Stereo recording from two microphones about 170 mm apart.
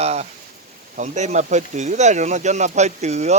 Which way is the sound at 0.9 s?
45° right (ahead or behind).